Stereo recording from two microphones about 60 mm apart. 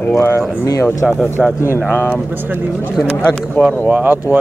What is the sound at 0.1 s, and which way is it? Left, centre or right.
Speech, left.